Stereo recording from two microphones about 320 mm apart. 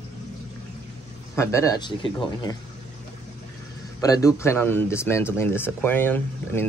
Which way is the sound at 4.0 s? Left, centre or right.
Centre.